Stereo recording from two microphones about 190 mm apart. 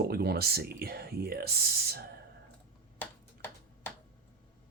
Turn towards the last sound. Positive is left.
turn(degrees=10)  # may be behind; listen again after turning